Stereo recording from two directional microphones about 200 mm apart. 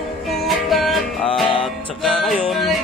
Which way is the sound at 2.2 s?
Centre (ahead or behind).